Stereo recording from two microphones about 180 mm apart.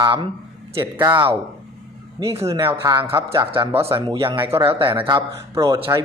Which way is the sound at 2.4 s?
15° right (ahead or behind).